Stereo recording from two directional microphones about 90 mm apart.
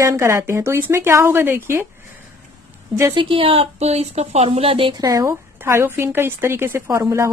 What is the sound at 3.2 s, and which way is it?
A woman's voice, 80° right.